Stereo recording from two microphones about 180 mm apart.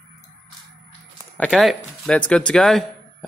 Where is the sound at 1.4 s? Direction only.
Centre (ahead or behind).